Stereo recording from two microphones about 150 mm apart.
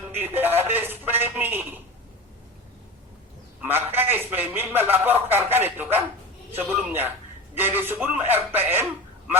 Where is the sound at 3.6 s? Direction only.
15° right (ahead or behind).